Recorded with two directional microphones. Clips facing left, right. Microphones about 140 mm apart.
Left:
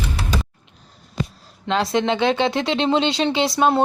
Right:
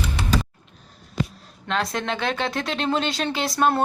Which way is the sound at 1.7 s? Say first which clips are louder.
Left 6 dB; 25° left (ahead or behind).